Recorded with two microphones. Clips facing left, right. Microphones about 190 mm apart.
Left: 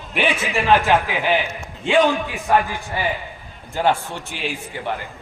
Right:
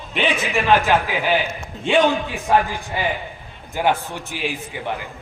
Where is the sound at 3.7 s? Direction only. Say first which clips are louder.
Left 1 dB; 15° right (ahead or behind).